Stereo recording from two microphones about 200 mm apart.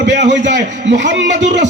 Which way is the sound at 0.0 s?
60° right (ahead or behind).